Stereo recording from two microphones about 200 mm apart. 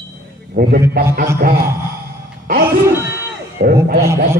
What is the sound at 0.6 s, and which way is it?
A man's voice, 45° right (ahead or behind).